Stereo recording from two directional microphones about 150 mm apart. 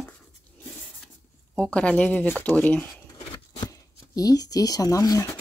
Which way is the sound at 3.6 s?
25° left (ahead or behind).